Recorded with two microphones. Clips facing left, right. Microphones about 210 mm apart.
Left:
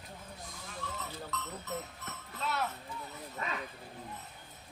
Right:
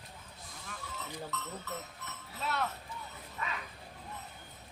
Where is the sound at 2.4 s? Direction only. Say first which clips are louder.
Even; centre (ahead or behind).